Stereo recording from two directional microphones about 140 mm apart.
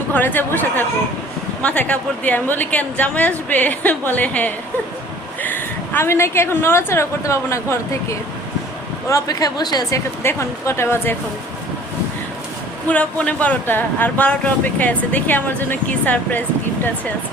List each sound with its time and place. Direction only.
0.1 s a woman's voice: 10° left (ahead or behind); by 10.0 s 30° left (ahead or behind)
10.2 s speech: 20° left (ahead or behind)
12.9 s speech: 10° left (ahead or behind)